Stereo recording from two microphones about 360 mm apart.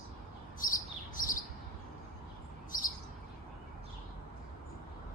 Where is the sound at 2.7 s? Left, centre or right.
Left.